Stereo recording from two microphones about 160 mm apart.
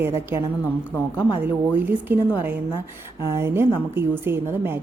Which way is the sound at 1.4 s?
10° right (ahead or behind).